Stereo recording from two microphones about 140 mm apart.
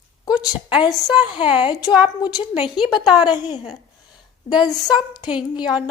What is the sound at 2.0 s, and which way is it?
Speech, 30° left (ahead or behind).